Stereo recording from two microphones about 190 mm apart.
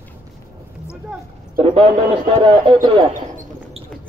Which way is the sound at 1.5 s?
30° right (ahead or behind).